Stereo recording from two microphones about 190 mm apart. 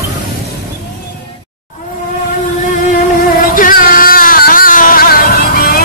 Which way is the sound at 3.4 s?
45° left (ahead or behind).